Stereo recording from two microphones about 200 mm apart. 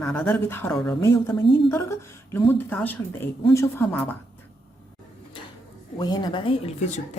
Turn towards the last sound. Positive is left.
turn(degrees=35)  # may be behind; listen again after turning